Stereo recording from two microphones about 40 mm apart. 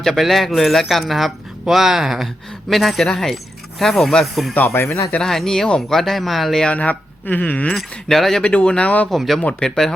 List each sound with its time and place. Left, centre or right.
0.0 s speech: centre
4.6 s speech: left
5.2 s speech: centre
6.7 s speech: left
7.3 s speech: left
8.0 s speech: centre
8.8 s speech: left
9.0 s speech: centre
9.6 s speech: centre